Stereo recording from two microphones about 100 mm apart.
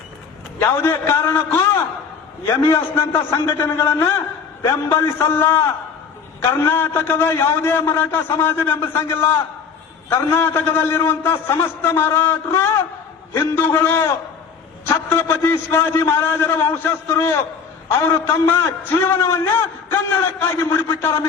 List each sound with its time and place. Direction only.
0.6 s a man's voice: 25° left (ahead or behind)
18.3 s a man's voice: 25° left (ahead or behind)